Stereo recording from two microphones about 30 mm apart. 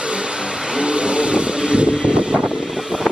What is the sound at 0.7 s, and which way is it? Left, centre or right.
Vehicle, right.